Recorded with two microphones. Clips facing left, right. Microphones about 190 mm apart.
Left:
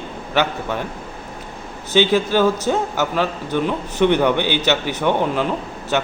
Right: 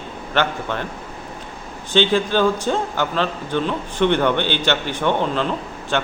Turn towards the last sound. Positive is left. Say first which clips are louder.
# left 2 dB
turn(degrees=5)  # may be behind; listen again after turning